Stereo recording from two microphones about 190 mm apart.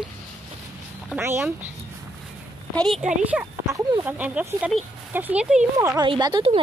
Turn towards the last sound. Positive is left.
turn(degrees=-25)  # may be behind; listen again after turning